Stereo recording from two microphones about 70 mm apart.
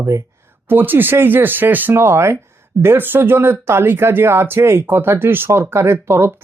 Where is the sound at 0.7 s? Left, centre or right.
Right.